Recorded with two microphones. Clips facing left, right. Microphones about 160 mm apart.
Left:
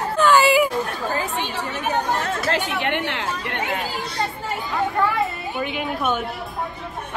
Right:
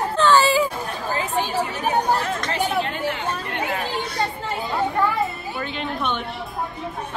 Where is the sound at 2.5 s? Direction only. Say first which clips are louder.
Left 1 dB; 75° left (ahead or behind).